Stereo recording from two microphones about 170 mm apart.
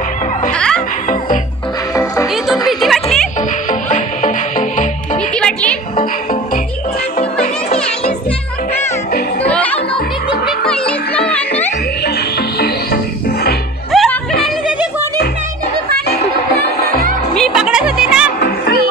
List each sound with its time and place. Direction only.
0.5 s music: 5° left (ahead or behind)
2.3 s music: centre (ahead or behind)
4.2 s music: 50° left (ahead or behind)
5.3 s music: 5° left (ahead or behind)
9.5 s music: 10° left (ahead or behind)
11.3 s music: 10° left (ahead or behind)
12.0 s music: 65° left (ahead or behind)
13.9 s music: 5° left (ahead or behind)
17.4 s music: 5° right (ahead or behind)